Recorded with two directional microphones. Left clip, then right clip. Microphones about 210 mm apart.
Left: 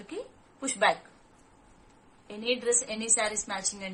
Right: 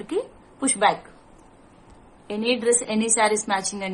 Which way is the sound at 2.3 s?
30° right (ahead or behind).